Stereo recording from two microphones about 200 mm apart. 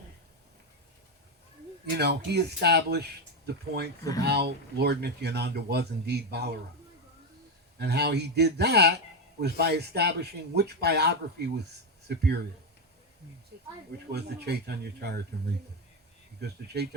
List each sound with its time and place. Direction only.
2.0 s speech: 55° right (ahead or behind)
7.8 s speech: 55° right (ahead or behind)
13.5 s speech: 55° right (ahead or behind)